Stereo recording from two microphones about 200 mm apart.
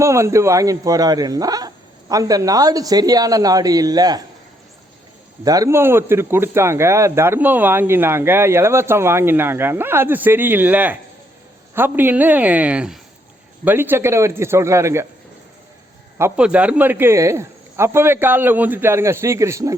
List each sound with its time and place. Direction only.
0.0 s speech: 15° right (ahead or behind)
5.5 s speech: 15° right (ahead or behind)
16.1 s speech: 10° right (ahead or behind)